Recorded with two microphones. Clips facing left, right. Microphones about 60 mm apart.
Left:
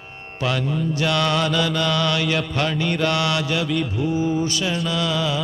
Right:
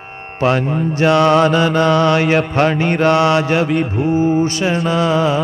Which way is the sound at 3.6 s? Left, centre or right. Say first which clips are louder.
Right 6 dB; right.